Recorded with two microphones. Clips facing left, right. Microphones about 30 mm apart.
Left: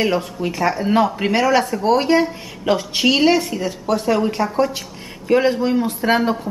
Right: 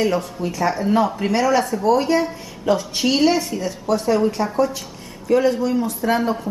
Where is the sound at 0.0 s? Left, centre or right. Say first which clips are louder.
Left 1 dB; left.